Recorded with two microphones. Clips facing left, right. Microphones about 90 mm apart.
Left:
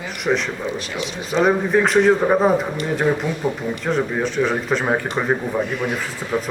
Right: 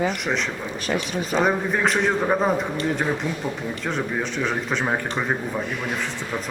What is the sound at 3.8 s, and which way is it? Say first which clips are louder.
Speech: left 5 dB; centre (ahead or behind).